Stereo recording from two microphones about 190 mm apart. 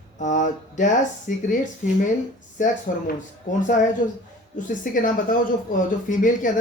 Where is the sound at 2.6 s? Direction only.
45° left (ahead or behind).